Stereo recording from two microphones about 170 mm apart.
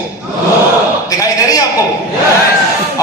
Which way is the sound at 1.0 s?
20° left (ahead or behind).